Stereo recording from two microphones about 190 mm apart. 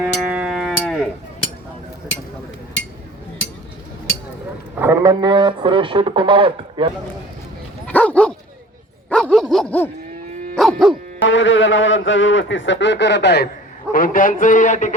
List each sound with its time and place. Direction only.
0.0 s music: 5° right (ahead or behind)
4.7 s a sound: 10° right (ahead or behind)
5.2 s speech: 25° right (ahead or behind)
7.9 s dog: 5° left (ahead or behind)
11.2 s a man's voice: 80° left; by 13.5 s 60° left (ahead or behind)
13.9 s a man's voice: 45° left (ahead or behind)